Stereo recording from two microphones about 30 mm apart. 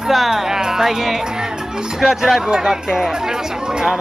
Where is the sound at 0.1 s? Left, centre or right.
Centre.